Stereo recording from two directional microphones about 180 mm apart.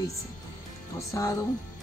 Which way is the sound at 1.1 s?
20° left (ahead or behind).